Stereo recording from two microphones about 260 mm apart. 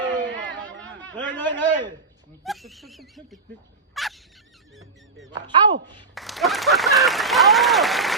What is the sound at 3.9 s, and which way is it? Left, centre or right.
Fowl, centre.